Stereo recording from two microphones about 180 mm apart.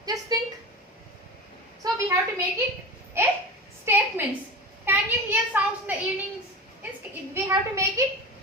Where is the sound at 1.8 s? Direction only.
15° right (ahead or behind).